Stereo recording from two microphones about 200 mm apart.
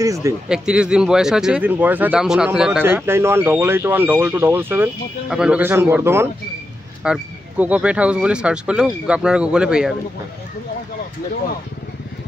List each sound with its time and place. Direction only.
0.0 s speech: 15° right (ahead or behind)
0.5 s speech: 5° right (ahead or behind)